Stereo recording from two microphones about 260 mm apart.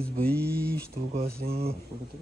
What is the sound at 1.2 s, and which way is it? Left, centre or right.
Speech, right.